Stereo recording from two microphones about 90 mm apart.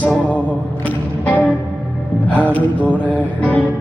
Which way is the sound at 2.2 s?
15° left (ahead or behind).